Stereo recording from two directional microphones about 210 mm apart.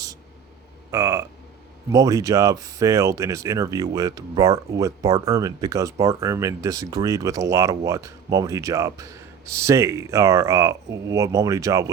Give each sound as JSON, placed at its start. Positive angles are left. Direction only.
{"t": 0.9, "sound": "speech", "side_deg": -15}